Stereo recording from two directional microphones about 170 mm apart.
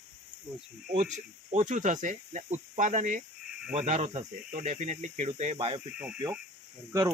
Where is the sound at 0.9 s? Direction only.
45° right (ahead or behind).